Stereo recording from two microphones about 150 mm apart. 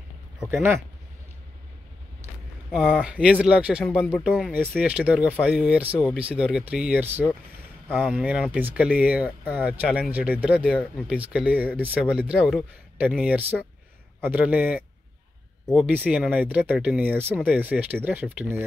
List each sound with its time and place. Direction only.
0.5 s speech: 15° right (ahead or behind)
2.7 s speech: 5° right (ahead or behind)
7.9 s speech: centre (ahead or behind)